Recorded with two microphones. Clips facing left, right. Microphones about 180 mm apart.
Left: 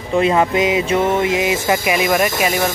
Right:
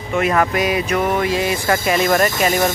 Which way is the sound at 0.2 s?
20° left (ahead or behind).